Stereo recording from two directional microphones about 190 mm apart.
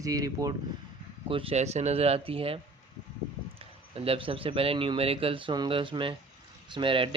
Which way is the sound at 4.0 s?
30° right (ahead or behind).